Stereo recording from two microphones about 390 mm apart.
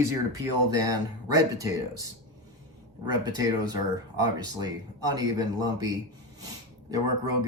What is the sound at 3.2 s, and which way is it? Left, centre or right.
Speech, centre.